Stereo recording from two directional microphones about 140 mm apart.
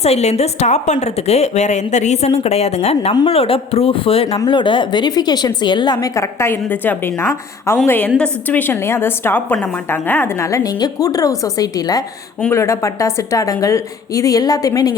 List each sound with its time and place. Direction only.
0.0 s a woman's voice: 50° left (ahead or behind); by 14.9 s 25° left (ahead or behind)